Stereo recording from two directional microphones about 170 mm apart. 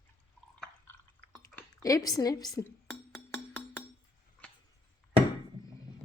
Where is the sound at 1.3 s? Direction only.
20° left (ahead or behind).